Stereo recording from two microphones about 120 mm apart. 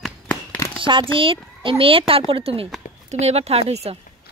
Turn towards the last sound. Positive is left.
turn(degrees=-60)  # may be behind; listen again after turning